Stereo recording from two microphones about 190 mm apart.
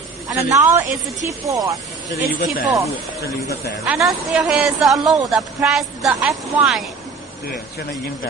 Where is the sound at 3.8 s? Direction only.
5° right (ahead or behind).